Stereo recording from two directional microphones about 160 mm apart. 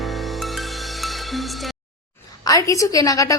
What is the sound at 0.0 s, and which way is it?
Music, centre (ahead or behind).